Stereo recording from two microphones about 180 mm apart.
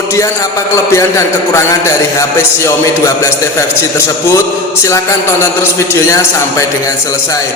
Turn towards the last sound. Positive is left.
turn(degrees=15)  # may be behind; listen again after turning